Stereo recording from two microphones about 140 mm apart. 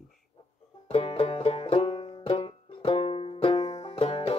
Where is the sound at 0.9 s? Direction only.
45° left (ahead or behind).